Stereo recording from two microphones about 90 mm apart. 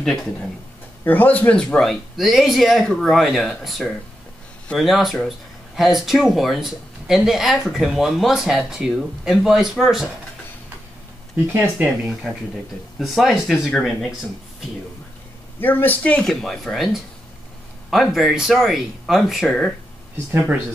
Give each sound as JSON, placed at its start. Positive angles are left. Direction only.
{"t": 0.0, "sound": "speech", "side_deg": 5}
{"t": 1.0, "sound": "speech", "side_deg": 20}
{"t": 1.8, "sound": "speech", "side_deg": 0}
{"t": 12.1, "sound": "speech", "side_deg": -5}
{"t": 15.6, "sound": "speech", "side_deg": 20}
{"t": 20.2, "sound": "speech", "side_deg": -20}